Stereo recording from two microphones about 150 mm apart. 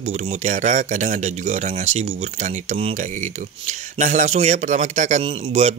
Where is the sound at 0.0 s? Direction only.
45° right (ahead or behind).